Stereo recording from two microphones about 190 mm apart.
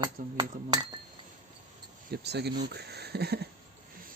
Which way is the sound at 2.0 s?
60° right (ahead or behind).